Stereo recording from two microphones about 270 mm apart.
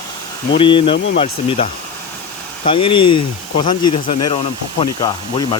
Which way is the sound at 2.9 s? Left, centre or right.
Centre.